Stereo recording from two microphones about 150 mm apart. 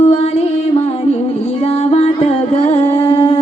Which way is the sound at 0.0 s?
45° left (ahead or behind).